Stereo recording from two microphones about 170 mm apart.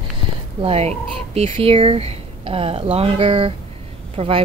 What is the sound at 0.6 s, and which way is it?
Speech, 35° right (ahead or behind).